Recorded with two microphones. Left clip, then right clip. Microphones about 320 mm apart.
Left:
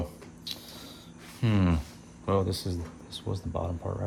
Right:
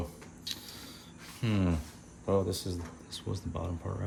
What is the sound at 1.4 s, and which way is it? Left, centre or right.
Speech, centre.